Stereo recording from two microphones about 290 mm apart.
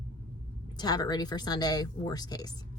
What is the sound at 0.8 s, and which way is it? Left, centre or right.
Speech, centre.